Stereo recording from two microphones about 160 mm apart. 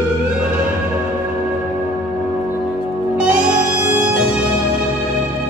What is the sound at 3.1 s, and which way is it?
Music, 10° right (ahead or behind).